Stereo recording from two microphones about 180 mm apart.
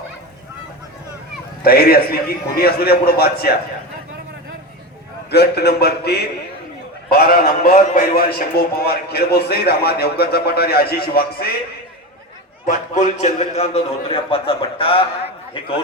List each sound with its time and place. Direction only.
1.6 s a man's voice: 55° left (ahead or behind)
5.3 s a man's voice: 65° left (ahead or behind)
12.6 s a man's voice: 45° left (ahead or behind)